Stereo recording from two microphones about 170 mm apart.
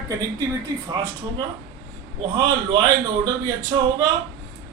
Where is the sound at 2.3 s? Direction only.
25° right (ahead or behind).